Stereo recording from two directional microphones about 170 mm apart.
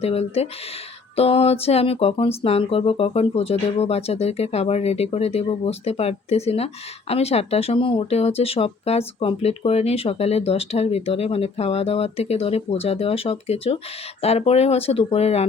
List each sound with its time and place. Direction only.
0.0 s speech: 35° left (ahead or behind)